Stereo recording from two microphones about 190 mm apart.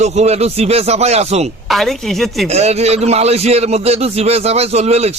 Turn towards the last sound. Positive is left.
turn(degrees=-35)  # may be behind; listen again after turning